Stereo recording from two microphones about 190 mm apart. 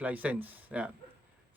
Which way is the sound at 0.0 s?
5° right (ahead or behind).